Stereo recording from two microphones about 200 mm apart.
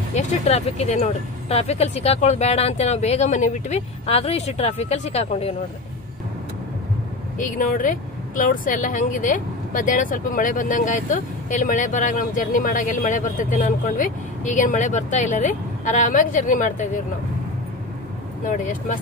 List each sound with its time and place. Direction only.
0.1 s speech: 30° left (ahead or behind)
7.3 s speech: 40° left (ahead or behind)
18.5 s speech: 40° left (ahead or behind)